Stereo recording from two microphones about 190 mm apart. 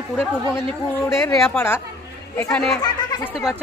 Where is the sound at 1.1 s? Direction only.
15° left (ahead or behind).